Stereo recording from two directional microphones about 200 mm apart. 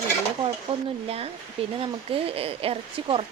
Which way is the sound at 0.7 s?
25° right (ahead or behind).